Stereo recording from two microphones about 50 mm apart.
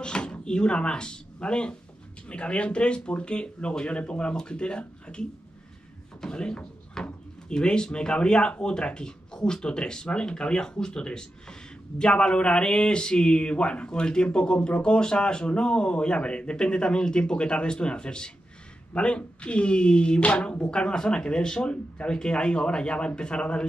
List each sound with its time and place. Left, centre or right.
0.0 s speech: centre